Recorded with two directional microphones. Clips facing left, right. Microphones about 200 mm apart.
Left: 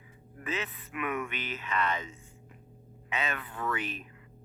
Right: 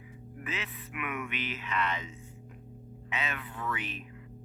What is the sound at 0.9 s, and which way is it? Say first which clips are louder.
Speech: left 3 dB; 40° left (ahead or behind).